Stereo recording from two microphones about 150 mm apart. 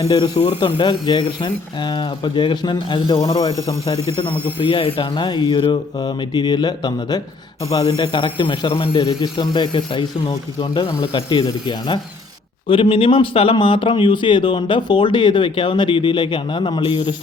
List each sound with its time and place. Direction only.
0.0 s speech: 25° left (ahead or behind)
4.6 s speech: 35° left (ahead or behind)